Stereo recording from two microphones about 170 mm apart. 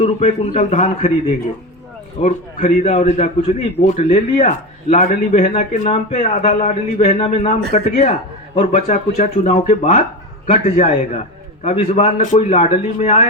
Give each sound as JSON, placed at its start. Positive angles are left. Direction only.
{"t": 0.0, "sound": "a man's voice", "side_deg": 45}
{"t": 2.2, "sound": "a man's voice", "side_deg": 45}